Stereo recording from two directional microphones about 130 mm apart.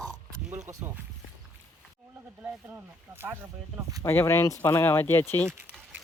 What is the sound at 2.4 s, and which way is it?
Speech, 15° right (ahead or behind).